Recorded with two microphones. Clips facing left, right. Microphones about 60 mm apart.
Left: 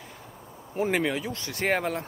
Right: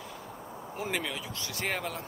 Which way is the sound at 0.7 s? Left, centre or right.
Left.